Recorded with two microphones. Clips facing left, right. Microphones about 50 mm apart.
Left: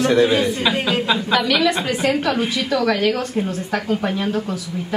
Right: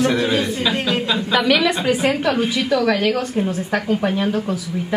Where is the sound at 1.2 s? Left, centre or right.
Centre.